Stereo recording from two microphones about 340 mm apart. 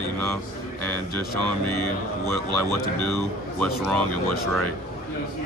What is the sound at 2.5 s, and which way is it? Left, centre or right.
Speech, right.